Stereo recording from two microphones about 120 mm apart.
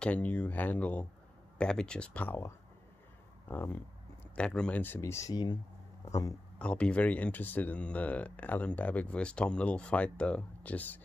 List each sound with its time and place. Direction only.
0.0 s speech: 10° left (ahead or behind)
5.3 s a man's voice: 35° left (ahead or behind)
6.6 s speech: 10° left (ahead or behind)